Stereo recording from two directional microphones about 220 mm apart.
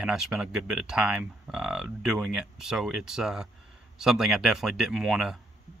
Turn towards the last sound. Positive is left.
turn(degrees=0)  # may be behind; listen again after turning